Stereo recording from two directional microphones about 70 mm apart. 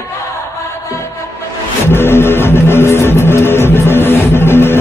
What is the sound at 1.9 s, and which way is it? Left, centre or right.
Music, left.